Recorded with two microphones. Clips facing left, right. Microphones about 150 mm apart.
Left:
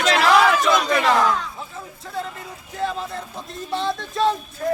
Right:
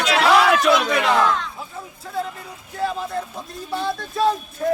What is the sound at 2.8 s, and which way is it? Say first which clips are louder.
Speech: right 2 dB; 5° right (ahead or behind).